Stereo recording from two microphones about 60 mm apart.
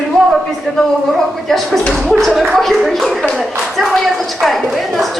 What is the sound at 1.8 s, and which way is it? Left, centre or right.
Speech, centre.